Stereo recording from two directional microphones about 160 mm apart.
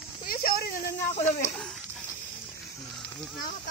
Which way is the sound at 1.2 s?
10° left (ahead or behind).